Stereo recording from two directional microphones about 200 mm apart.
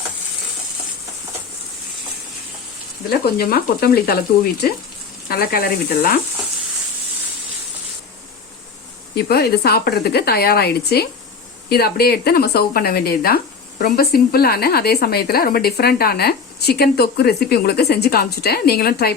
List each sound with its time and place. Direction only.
3.1 s speech: 50° left (ahead or behind)
9.1 s speech: 50° left (ahead or behind)